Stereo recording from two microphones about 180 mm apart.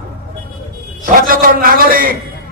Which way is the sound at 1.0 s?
50° right (ahead or behind).